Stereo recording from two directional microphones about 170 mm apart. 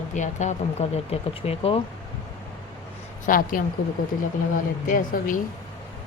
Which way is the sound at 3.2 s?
55° left (ahead or behind).